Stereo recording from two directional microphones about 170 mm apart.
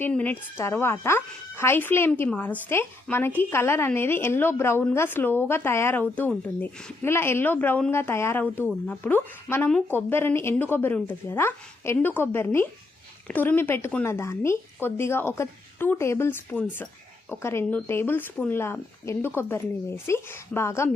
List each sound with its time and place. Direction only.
0.0 s a woman's voice: 10° left (ahead or behind)